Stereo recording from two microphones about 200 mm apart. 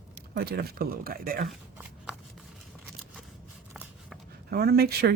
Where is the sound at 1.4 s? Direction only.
5° right (ahead or behind).